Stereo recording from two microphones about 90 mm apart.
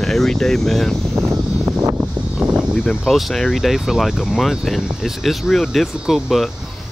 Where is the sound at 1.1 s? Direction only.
30° right (ahead or behind).